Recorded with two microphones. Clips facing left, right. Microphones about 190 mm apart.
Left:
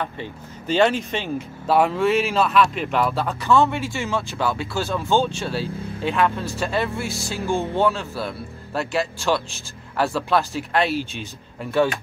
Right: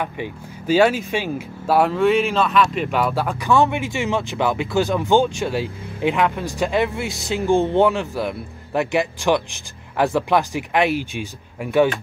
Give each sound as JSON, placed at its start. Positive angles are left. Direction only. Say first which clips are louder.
{"t": 0.0, "sound": "speech", "louder": "right 3 dB", "side_deg": -10}
{"t": 3.3, "sound": "speech", "louder": "even", "side_deg": -15}